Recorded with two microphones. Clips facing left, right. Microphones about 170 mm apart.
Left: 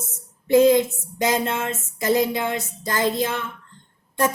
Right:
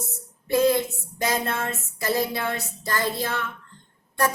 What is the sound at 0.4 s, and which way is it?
Speech, 20° left (ahead or behind).